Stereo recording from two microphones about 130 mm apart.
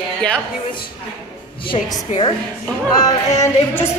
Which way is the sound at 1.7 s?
40° left (ahead or behind).